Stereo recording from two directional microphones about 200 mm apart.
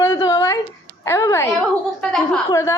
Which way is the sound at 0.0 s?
15° left (ahead or behind).